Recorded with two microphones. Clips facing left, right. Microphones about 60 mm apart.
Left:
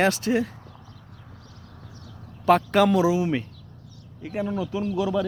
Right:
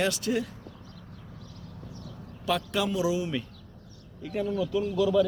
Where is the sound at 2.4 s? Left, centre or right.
Left.